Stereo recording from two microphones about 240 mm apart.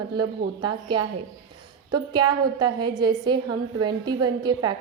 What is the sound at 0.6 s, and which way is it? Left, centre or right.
Speech, centre.